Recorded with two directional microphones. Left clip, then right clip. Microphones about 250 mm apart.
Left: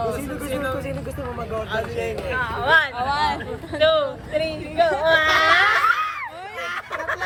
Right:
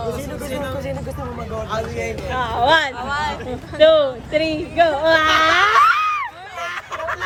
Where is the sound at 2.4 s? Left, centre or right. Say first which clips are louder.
Right 3 dB; right.